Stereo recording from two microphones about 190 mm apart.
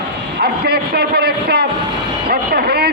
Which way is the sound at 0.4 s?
55° right (ahead or behind).